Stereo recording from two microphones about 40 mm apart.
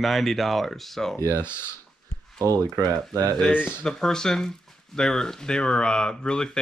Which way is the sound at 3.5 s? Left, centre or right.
Left.